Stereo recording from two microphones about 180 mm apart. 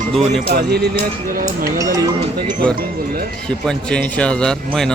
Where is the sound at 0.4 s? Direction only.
65° right (ahead or behind).